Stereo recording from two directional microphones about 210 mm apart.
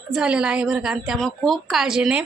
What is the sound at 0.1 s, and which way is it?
A woman's voice, 5° right (ahead or behind).